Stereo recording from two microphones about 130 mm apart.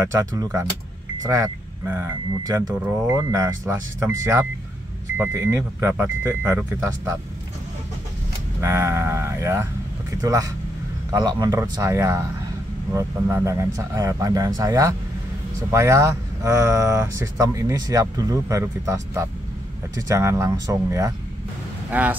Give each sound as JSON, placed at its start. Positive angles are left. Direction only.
{"t": 0.1, "sound": "speech", "side_deg": -25}
{"t": 8.5, "sound": "speech", "side_deg": -20}
{"t": 21.9, "sound": "speech", "side_deg": -10}